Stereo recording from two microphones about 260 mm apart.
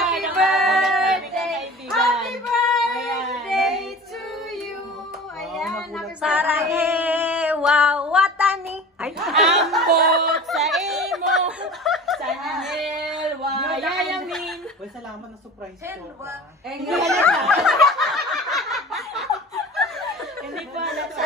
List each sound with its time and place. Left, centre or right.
0.0 s child singing: centre
3.4 s female singing: centre
5.4 s child singing: centre
6.9 s female singing: centre
9.8 s snicker: right
10.5 s chatter: centre
11.6 s a sound: centre
17.3 s snicker: centre